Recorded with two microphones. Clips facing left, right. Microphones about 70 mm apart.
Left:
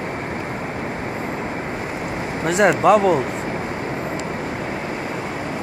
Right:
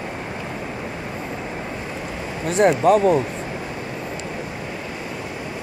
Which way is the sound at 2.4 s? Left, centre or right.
Left.